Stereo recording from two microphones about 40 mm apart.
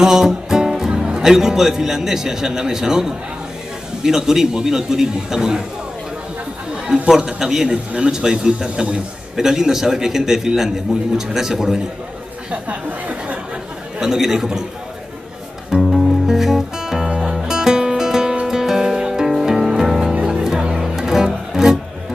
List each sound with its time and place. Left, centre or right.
0.0 s a man's voice: centre
7.1 s a man's voice: centre
12.6 s speech: right
13.9 s a man's voice: centre
15.8 s music: centre
16.3 s music: centre
20.2 s music: right